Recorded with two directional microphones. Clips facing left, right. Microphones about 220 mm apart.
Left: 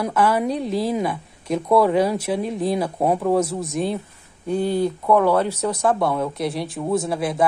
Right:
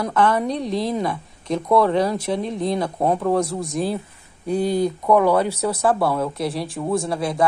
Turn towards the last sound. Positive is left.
turn(degrees=0)  # may be behind; listen again after turning